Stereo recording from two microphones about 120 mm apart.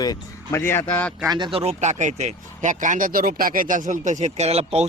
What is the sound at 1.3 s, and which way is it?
Speech, 40° right (ahead or behind).